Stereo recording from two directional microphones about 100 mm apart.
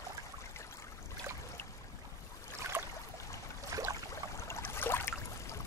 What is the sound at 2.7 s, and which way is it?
Boat, 20° right (ahead or behind).